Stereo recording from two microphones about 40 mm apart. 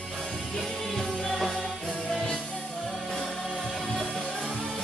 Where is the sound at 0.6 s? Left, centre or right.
Centre.